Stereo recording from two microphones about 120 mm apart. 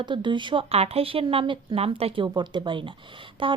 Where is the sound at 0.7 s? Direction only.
55° right (ahead or behind).